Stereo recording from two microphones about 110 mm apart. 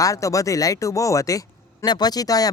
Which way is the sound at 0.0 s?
30° left (ahead or behind).